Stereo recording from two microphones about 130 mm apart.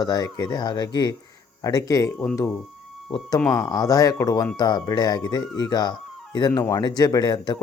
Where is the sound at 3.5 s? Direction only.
30° left (ahead or behind).